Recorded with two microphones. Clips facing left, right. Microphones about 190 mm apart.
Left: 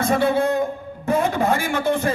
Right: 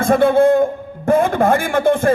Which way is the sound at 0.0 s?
50° right (ahead or behind).